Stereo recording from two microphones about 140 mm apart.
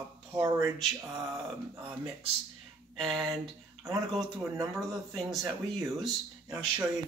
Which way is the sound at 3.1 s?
35° right (ahead or behind).